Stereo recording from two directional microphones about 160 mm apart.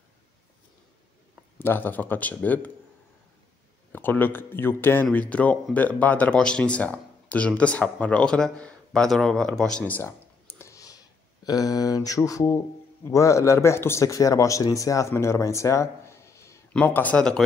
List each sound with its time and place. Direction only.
1.6 s a man's voice: 15° left (ahead or behind)
3.9 s a man's voice: 10° left (ahead or behind)